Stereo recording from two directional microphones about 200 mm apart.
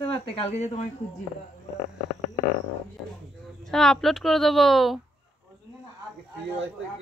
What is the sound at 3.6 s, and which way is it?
A woman's voice, centre (ahead or behind).